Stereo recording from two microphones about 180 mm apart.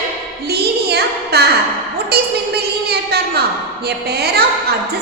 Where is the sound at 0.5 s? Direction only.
65° right (ahead or behind).